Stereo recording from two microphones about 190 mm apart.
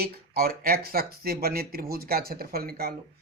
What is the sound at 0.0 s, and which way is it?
Speech, 55° right (ahead or behind).